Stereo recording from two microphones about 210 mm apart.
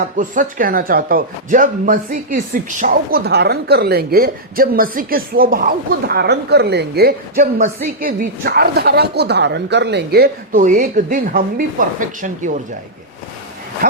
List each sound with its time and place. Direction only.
0.2 s speech: 40° right (ahead or behind)